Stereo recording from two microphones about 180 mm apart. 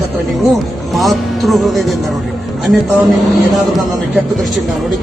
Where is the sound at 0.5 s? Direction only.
Centre (ahead or behind).